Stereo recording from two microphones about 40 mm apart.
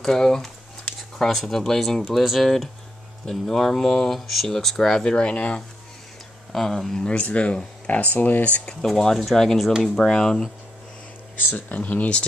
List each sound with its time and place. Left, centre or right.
0.0 s speech: centre
5.2 s speech: left
6.5 s speech: centre
7.2 s speech: left
8.8 s speech: centre
11.5 s speech: left